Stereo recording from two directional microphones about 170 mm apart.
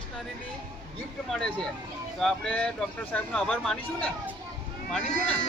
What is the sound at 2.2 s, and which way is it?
Speech, 5° left (ahead or behind).